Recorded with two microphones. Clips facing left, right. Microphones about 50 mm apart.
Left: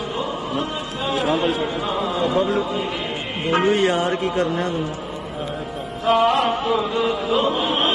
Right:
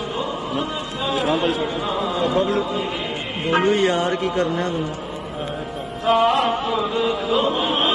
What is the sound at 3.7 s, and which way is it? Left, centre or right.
Speech, left.